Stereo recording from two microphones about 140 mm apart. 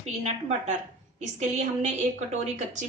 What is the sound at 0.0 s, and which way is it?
A woman's voice, 50° right (ahead or behind).